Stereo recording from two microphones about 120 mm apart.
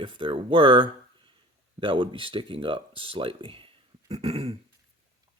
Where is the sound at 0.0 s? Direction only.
45° right (ahead or behind).